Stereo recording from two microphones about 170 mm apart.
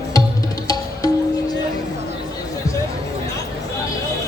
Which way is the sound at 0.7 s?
20° left (ahead or behind).